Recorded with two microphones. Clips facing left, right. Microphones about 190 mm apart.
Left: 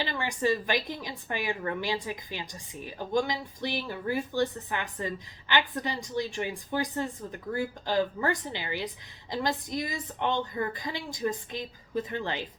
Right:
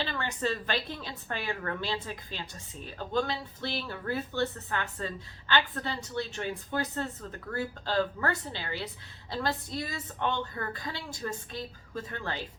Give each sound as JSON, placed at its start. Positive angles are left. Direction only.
{"t": 0.0, "sound": "a woman's voice", "side_deg": 15}